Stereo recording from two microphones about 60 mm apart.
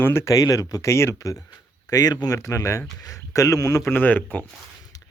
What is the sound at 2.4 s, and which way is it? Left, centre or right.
Speech, left.